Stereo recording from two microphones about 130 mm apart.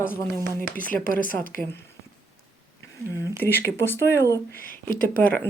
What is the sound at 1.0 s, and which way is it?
Speech, 90° left.